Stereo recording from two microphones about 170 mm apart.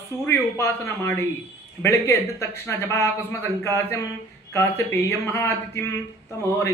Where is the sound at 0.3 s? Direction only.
15° left (ahead or behind).